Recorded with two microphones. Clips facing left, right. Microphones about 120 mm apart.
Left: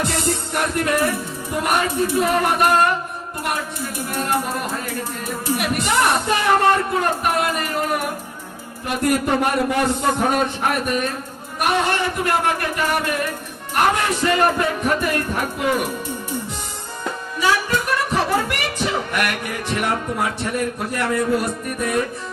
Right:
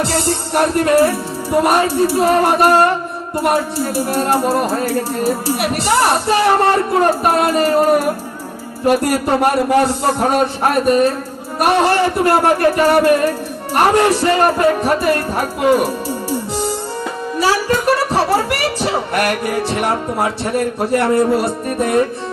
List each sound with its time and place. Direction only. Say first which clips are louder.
0.0 s speech: right 4 dB; 30° right (ahead or behind)